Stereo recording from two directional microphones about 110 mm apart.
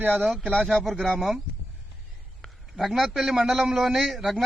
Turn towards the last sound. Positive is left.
turn(degrees=-5)  # may be behind; listen again after turning